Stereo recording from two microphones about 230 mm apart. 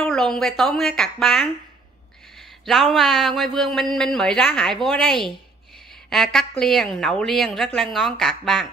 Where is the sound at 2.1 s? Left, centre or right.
Centre.